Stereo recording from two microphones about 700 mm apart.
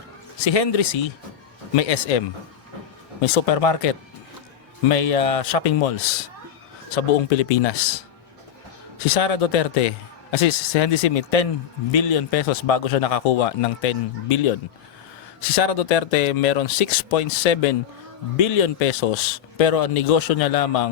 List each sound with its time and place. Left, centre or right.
0.4 s a man's voice: left
4.9 s a man's voice: left
6.9 s a man's voice: left